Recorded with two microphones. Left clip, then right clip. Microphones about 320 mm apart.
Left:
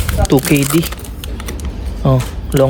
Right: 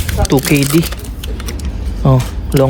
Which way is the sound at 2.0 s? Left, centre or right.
Centre.